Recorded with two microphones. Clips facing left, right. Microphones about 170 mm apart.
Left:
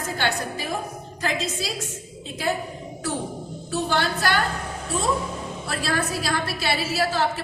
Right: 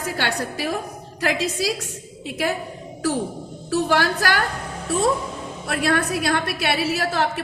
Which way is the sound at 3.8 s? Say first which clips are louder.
Right 2 dB; 75° right (ahead or behind).